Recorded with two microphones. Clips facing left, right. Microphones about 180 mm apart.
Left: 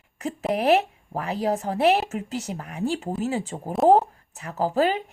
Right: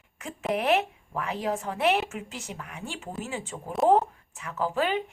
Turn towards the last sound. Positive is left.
turn(degrees=35)  # may be behind; listen again after turning